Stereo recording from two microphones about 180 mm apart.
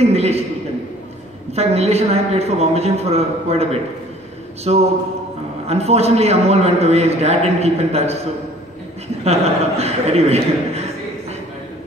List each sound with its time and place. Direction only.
0.0 s a man's voice: 35° right (ahead or behind)
1.5 s a man's voice: 35° right (ahead or behind)
4.7 s a man's voice: 35° right (ahead or behind)
9.2 s a man's voice: 35° right (ahead or behind)